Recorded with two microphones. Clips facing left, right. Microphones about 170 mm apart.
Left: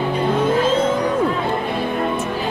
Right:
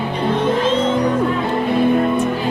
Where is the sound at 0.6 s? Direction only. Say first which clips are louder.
Even; 5° left (ahead or behind).